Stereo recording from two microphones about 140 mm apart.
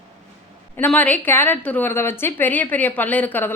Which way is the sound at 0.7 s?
10° left (ahead or behind).